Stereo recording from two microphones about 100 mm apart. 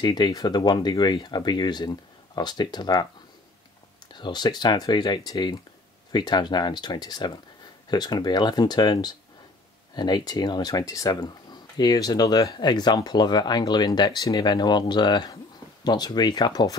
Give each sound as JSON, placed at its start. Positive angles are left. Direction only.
{"t": 0.0, "sound": "speech", "side_deg": 45}
{"t": 4.1, "sound": "speech", "side_deg": 45}